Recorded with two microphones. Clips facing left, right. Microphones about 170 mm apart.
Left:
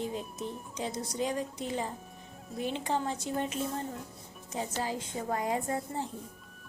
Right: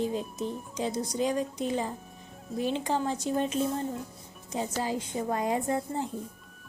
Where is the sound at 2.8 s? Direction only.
20° left (ahead or behind).